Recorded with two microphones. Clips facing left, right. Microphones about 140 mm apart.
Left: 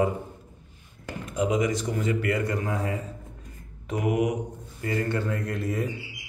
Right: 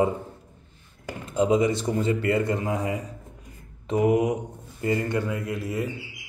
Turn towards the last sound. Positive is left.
turn(degrees=0)  # may be behind; listen again after turning